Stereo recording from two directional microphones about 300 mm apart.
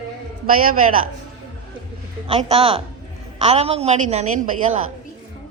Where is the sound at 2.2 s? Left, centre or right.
Centre.